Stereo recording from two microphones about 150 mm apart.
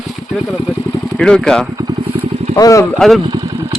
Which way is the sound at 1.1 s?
Centre (ahead or behind).